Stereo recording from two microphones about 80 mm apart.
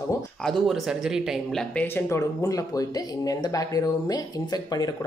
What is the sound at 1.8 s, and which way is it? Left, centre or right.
Speech, left.